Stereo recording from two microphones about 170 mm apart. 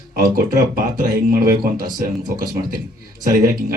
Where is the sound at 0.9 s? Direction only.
60° right (ahead or behind).